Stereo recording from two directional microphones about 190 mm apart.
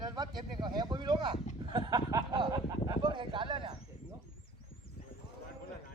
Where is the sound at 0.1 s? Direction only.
20° right (ahead or behind).